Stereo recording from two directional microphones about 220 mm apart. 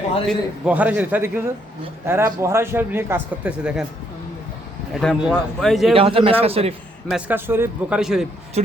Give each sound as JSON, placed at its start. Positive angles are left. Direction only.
{"t": 0.3, "sound": "speech", "side_deg": -5}
{"t": 4.9, "sound": "a man's voice", "side_deg": 0}
{"t": 5.9, "sound": "a man's voice", "side_deg": -25}
{"t": 7.1, "sound": "a man's voice", "side_deg": -10}